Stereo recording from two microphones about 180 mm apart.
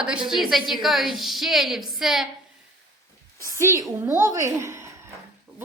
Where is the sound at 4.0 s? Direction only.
15° right (ahead or behind).